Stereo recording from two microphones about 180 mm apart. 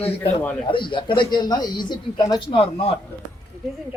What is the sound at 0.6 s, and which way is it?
Speech, 30° left (ahead or behind).